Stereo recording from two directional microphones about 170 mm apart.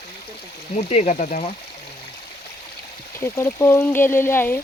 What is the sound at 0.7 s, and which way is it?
Speech, 45° left (ahead or behind).